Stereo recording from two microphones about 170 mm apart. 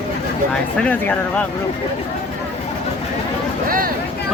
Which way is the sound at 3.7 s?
55° right (ahead or behind).